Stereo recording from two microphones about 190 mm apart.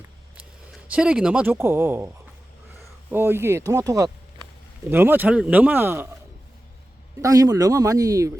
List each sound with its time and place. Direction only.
0.3 s speech: 5° right (ahead or behind)
3.1 s speech: 10° right (ahead or behind)
7.2 s speech: 20° right (ahead or behind)